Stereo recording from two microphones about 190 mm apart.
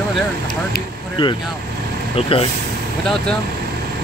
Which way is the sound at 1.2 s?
30° left (ahead or behind).